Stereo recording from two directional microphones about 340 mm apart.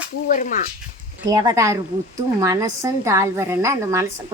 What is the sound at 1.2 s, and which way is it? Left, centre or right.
A woman's voice, centre.